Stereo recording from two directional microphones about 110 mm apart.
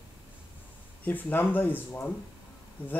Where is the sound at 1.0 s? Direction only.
15° left (ahead or behind).